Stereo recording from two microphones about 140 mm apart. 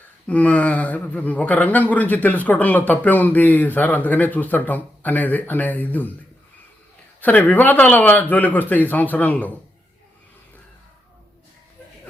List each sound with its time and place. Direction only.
0.3 s speech: 10° left (ahead or behind)
7.2 s speech: 10° left (ahead or behind)